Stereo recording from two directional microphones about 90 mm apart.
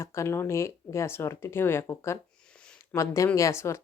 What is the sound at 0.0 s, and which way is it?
Speech, 30° left (ahead or behind).